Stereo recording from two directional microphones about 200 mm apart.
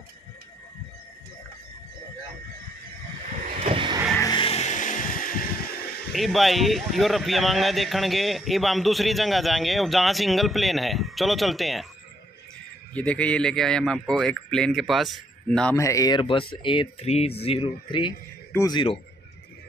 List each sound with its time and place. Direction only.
3.5 s vehicle: 30° right (ahead or behind)
4.2 s a sound: 25° left (ahead or behind); by 5.8 s 45° left (ahead or behind)
6.1 s a man's voice: centre (ahead or behind)
12.9 s a man's voice: 5° left (ahead or behind)
15.7 s speech: 15° left (ahead or behind)